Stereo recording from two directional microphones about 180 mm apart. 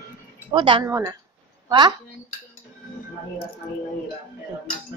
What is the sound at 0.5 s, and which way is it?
Speech, 30° right (ahead or behind).